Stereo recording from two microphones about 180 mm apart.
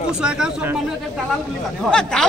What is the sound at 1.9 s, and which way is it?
Speech, 5° left (ahead or behind).